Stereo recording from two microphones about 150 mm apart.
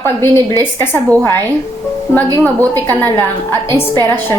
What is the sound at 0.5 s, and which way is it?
Speech, 25° right (ahead or behind).